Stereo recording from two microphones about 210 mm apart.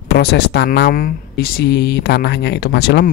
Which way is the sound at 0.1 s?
50° left (ahead or behind).